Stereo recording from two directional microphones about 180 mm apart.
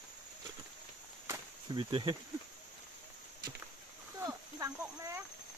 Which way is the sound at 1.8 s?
30° right (ahead or behind).